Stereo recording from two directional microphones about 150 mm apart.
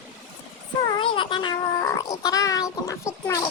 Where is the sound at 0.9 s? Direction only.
35° left (ahead or behind).